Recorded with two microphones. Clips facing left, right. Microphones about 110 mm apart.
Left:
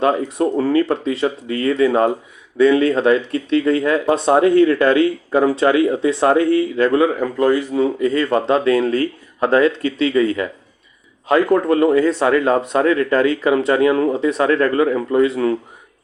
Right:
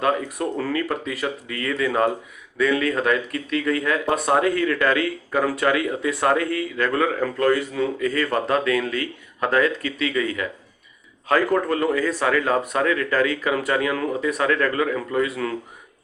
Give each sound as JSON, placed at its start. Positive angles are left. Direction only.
{"t": 0.3, "sound": "speech", "side_deg": 25}